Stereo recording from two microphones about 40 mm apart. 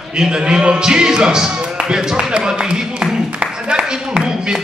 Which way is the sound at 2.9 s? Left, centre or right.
Right.